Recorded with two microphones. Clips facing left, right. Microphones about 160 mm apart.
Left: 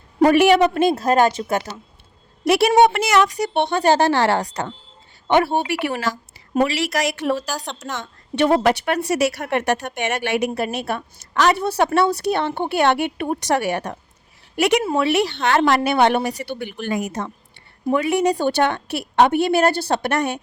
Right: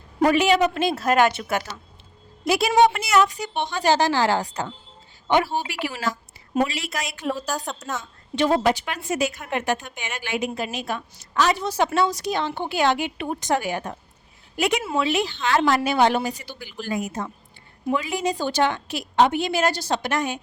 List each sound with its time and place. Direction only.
0.2 s a woman's voice: 55° left (ahead or behind)
0.7 s speech: 50° left (ahead or behind)
1.0 s a woman's voice: 35° left (ahead or behind)
2.4 s speech: 70° left (ahead or behind); by 3.3 s 90° left
3.4 s a woman's voice: 65° left (ahead or behind)
7.5 s speech: centre (ahead or behind)
8.4 s speech: 65° left (ahead or behind)
17.9 s a woman's voice: 65° left (ahead or behind)